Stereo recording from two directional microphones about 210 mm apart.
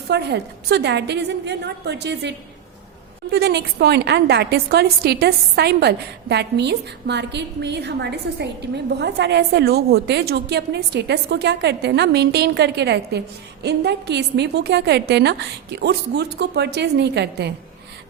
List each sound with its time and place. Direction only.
0.1 s a woman's voice: 55° right (ahead or behind)
3.3 s a woman's voice: 50° right (ahead or behind)